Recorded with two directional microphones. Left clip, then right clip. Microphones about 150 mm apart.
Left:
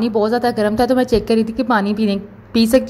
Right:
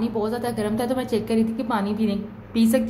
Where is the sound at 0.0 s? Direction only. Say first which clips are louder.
Left 9 dB; 55° left (ahead or behind).